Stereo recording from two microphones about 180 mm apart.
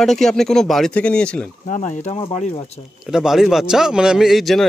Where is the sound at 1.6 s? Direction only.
45° left (ahead or behind).